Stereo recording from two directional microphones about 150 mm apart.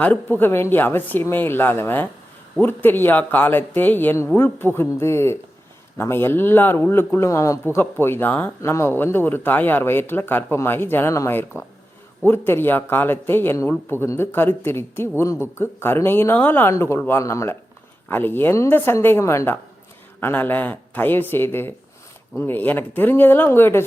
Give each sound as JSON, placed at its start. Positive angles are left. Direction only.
{"t": 0.0, "sound": "a man's voice", "side_deg": 10}